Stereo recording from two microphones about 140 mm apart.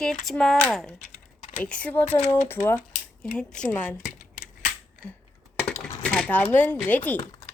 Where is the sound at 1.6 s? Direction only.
10° left (ahead or behind).